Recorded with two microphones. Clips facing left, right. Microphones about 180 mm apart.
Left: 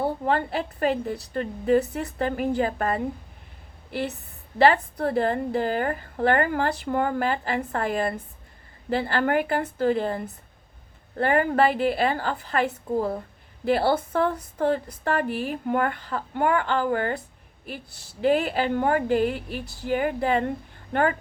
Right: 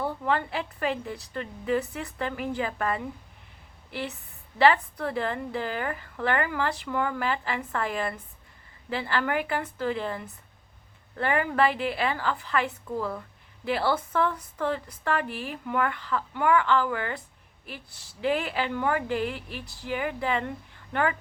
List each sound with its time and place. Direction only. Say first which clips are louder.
0.0 s a woman's voice: left 3 dB; 35° left (ahead or behind)
4.5 s a woman's voice: left 2 dB; 45° left (ahead or behind)
18.2 s a woman's voice: left 5 dB; 45° left (ahead or behind)